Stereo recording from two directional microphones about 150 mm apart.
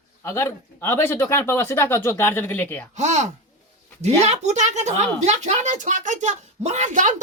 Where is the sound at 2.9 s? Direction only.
50° right (ahead or behind).